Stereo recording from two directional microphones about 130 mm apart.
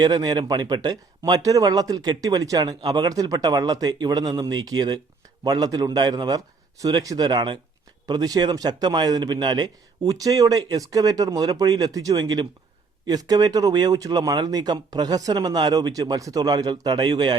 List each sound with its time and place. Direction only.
0.0 s speech: 30° right (ahead or behind)